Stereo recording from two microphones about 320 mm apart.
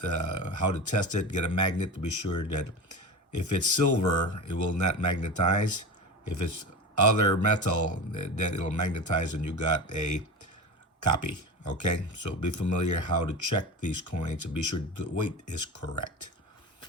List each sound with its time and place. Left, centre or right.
0.0 s speech: left